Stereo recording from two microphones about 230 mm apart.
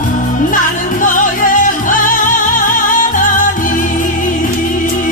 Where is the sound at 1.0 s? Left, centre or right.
Left.